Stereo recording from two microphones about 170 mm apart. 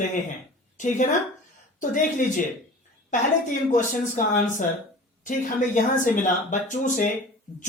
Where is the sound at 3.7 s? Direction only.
50° left (ahead or behind).